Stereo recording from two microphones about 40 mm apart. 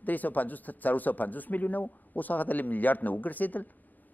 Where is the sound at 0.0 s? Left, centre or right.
Left.